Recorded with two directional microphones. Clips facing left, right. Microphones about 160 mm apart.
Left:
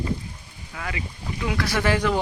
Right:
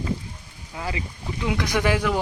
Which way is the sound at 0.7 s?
25° right (ahead or behind).